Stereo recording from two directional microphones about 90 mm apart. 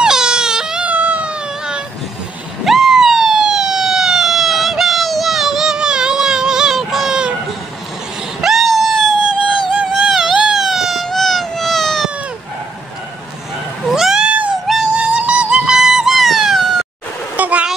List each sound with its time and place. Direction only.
0.0 s baby cry: 10° right (ahead or behind)
2.6 s police car: 5° right (ahead or behind)
8.4 s screaming: centre (ahead or behind)
9.7 s a sound: 10° right (ahead or behind)
13.8 s cat: 5° right (ahead or behind)
14.7 s music: 10° right (ahead or behind)
17.4 s a sound: 15° right (ahead or behind)